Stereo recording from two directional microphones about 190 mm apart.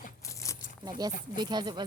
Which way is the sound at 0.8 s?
20° right (ahead or behind).